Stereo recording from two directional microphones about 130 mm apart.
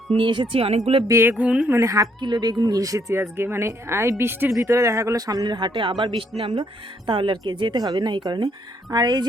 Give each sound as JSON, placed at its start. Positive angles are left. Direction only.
{"t": 0.2, "sound": "a woman's voice", "side_deg": -40}
{"t": 0.5, "sound": "speech", "side_deg": -50}
{"t": 1.0, "sound": "a sound", "side_deg": -20}
{"t": 1.7, "sound": "a woman's voice", "side_deg": -25}